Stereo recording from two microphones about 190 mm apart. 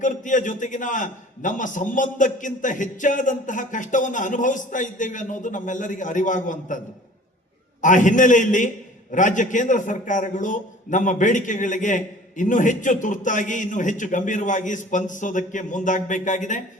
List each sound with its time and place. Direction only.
0.0 s a man's voice: 40° left (ahead or behind)
7.8 s a man's voice: 40° left (ahead or behind)